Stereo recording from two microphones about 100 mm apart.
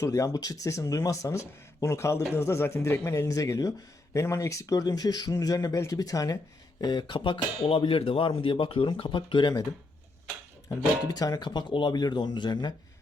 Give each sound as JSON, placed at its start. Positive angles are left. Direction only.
{"t": 0.0, "sound": "speech", "side_deg": 30}
{"t": 11.1, "sound": "speech", "side_deg": 40}